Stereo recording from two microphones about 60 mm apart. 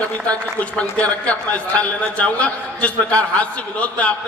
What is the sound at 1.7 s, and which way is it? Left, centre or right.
A man's voice, left.